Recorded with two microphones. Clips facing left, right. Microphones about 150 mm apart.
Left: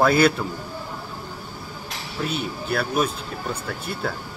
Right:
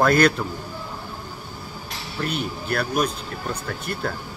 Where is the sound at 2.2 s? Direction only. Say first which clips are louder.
Even; 5° left (ahead or behind).